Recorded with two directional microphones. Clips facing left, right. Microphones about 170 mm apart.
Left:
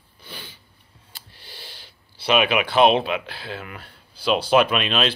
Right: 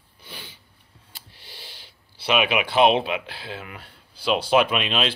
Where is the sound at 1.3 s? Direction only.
15° right (ahead or behind).